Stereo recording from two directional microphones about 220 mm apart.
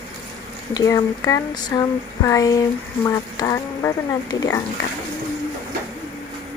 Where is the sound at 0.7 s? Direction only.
15° left (ahead or behind).